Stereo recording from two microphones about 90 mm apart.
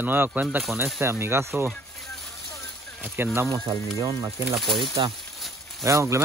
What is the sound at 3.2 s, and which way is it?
Speech, 25° right (ahead or behind).